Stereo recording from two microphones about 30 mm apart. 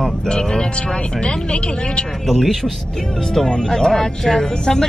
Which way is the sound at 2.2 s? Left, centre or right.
Centre.